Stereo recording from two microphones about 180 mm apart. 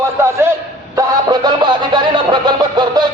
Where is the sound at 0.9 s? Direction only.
20° right (ahead or behind).